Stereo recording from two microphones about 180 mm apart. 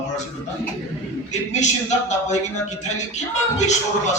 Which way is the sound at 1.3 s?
40° left (ahead or behind).